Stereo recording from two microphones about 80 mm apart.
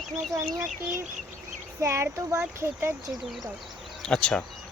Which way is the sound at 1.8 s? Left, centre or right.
Right.